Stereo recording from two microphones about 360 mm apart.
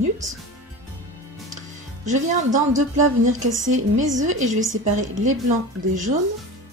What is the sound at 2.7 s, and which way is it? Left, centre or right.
Speech, right.